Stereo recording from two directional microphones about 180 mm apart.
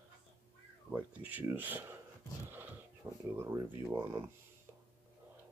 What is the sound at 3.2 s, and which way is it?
Speech, 15° right (ahead or behind).